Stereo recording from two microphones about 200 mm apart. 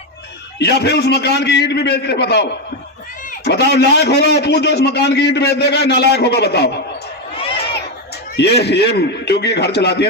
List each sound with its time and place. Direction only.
0.6 s a man's voice: 55° left (ahead or behind)
7.3 s a sound: 25° left (ahead or behind)
8.4 s a man's voice: 55° left (ahead or behind)